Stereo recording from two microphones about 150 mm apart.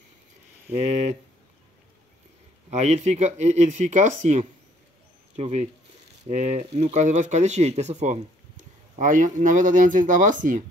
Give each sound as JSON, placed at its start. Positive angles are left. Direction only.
{"t": 0.7, "sound": "speech", "side_deg": -50}
{"t": 2.7, "sound": "speech", "side_deg": -50}